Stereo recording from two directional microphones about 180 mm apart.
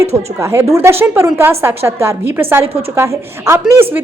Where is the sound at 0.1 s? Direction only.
35° right (ahead or behind).